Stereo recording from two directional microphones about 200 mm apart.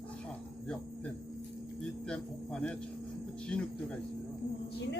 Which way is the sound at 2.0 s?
5° left (ahead or behind).